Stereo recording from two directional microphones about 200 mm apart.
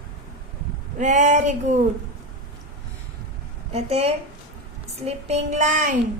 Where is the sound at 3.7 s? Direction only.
30° right (ahead or behind).